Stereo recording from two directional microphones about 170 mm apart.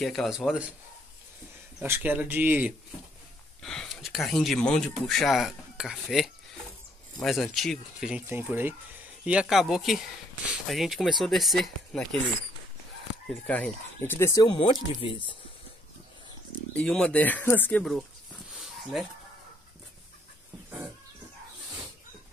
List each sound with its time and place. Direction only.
0.0 s speech: centre (ahead or behind)
1.8 s speech: 10° right (ahead or behind)
3.6 s speech: 5° left (ahead or behind)
13.3 s speech: 10° left (ahead or behind); by 15.3 s 30° left (ahead or behind)
16.7 s speech: 5° left (ahead or behind)
18.5 s dog: centre (ahead or behind)